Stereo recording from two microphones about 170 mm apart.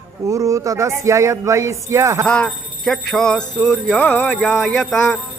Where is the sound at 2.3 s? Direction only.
5° left (ahead or behind).